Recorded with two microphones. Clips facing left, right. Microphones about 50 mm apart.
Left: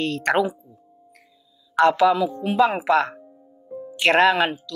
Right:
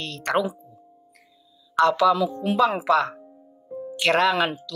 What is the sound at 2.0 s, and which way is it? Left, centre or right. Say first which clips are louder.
Speech: left 1 dB; centre.